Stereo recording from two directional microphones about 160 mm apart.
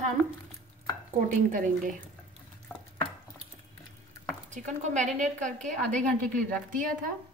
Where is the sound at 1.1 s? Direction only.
55° right (ahead or behind).